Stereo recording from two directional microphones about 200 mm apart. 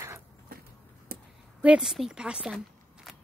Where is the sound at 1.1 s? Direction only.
50° right (ahead or behind).